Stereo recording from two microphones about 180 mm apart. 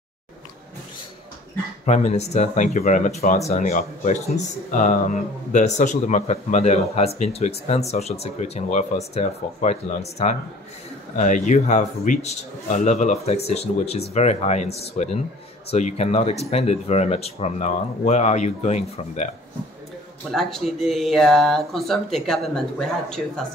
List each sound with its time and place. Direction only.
1.9 s a man's voice: 40° left (ahead or behind)
20.2 s speech: centre (ahead or behind)